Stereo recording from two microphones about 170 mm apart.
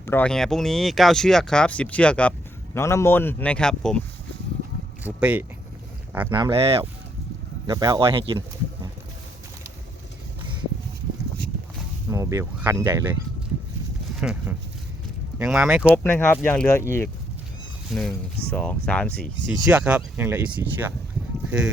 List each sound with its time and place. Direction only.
0.0 s a man's voice: 10° left (ahead or behind)
5.0 s speech: 10° right (ahead or behind)
6.3 s speech: 30° right (ahead or behind)
12.1 s speech: 20° right (ahead or behind)
14.2 s speech: 5° right (ahead or behind)
16.0 s a man's voice: 10° left (ahead or behind)
17.9 s speech: centre (ahead or behind)